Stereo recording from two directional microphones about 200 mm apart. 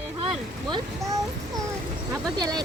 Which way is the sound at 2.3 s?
20° right (ahead or behind).